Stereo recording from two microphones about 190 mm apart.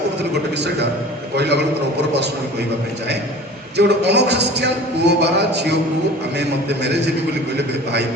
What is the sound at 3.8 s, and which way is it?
A man's voice, 60° right (ahead or behind).